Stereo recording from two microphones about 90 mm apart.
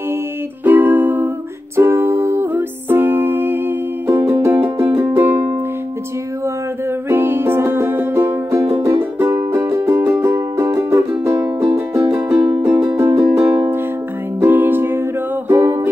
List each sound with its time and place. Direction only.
0.7 s music: 20° right (ahead or behind)
7.1 s music: 25° right (ahead or behind)
14.4 s music: 20° right (ahead or behind)